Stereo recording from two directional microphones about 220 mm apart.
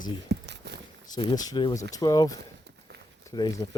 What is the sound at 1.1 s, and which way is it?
Speech, 20° left (ahead or behind).